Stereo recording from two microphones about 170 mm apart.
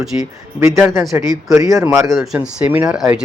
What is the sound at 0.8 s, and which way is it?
Speech, centre (ahead or behind).